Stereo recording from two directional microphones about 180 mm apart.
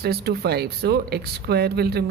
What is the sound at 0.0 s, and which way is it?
Speech, 60° right (ahead or behind).